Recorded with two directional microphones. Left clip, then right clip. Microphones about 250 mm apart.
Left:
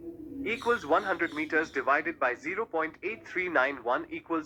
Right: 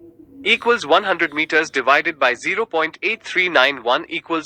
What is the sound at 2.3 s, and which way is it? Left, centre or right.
Speech, right.